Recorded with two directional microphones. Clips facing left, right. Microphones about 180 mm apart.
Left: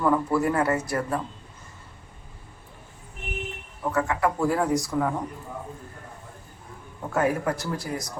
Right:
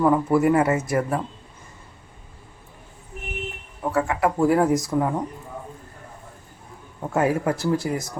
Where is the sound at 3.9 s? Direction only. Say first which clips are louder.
Right 2 dB; 25° right (ahead or behind).